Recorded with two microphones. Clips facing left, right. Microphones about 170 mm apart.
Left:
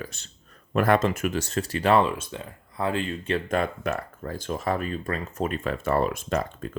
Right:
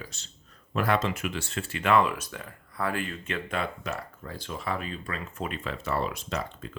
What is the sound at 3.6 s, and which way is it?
Speech, 50° left (ahead or behind).